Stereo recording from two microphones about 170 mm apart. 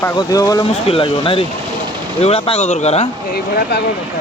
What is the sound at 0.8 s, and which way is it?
Speech, 30° left (ahead or behind).